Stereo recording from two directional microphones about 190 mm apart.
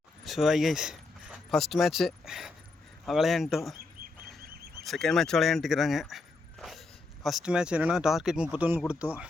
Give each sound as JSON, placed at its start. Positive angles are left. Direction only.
{"t": 0.3, "sound": "speech", "side_deg": 0}
{"t": 4.4, "sound": "a sound", "side_deg": -55}
{"t": 4.8, "sound": "speech", "side_deg": 0}